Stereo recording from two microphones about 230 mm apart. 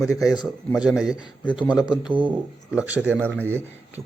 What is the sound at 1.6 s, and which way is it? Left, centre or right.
Speech, centre.